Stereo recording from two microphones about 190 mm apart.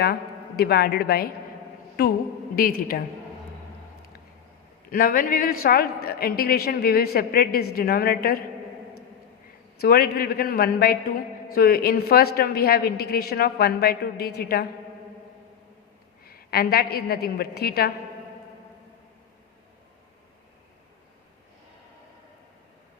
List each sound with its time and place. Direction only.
0.0 s a woman's voice: 55° left (ahead or behind)
4.9 s a woman's voice: 50° left (ahead or behind)
9.8 s a woman's voice: 55° left (ahead or behind)
16.2 s a woman's voice: 55° left (ahead or behind)